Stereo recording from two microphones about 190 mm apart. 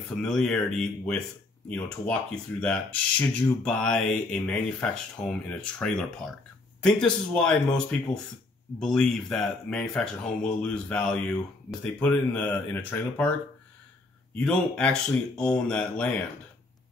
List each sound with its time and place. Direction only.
0.1 s speech: centre (ahead or behind)
14.4 s speech: 5° left (ahead or behind)